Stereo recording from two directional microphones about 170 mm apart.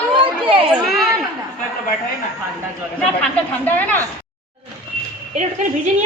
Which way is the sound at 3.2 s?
10° left (ahead or behind).